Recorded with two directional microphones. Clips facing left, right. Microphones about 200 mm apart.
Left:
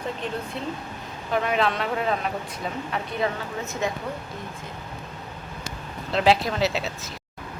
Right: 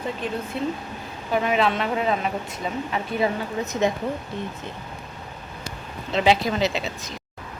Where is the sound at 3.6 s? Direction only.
20° right (ahead or behind).